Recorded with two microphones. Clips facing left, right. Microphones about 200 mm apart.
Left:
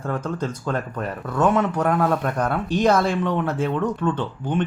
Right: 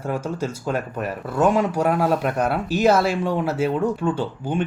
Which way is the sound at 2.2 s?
10° right (ahead or behind).